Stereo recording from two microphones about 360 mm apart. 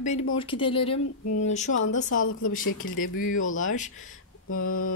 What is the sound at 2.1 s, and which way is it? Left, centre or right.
Speech, left.